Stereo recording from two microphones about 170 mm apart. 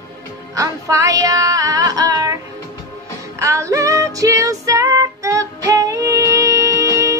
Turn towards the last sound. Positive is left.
turn(degrees=-20)  # may be behind; listen again after turning